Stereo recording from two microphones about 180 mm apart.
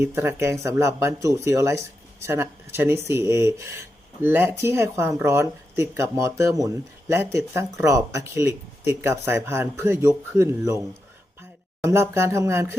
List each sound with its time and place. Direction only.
0.0 s speech: 10° right (ahead or behind)
11.9 s speech: 15° right (ahead or behind)